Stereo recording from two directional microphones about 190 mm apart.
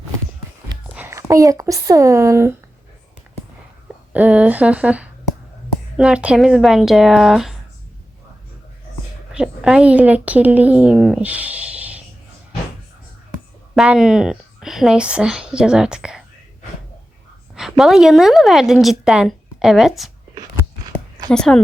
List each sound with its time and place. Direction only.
0.9 s speech: 15° right (ahead or behind)
4.1 s a woman's voice: 10° right (ahead or behind)
9.3 s a woman's voice: 5° right (ahead or behind)
13.7 s a woman's voice: 5° right (ahead or behind)
17.5 s a woman's voice: centre (ahead or behind)
20.3 s a sound: 20° right (ahead or behind)
21.2 s a woman's voice: 5° left (ahead or behind)